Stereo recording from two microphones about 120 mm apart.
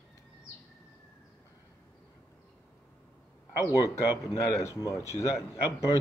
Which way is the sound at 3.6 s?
30° left (ahead or behind).